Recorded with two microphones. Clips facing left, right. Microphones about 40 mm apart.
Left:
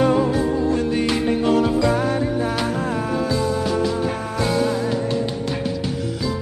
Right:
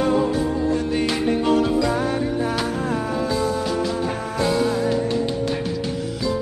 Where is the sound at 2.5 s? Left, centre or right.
Left.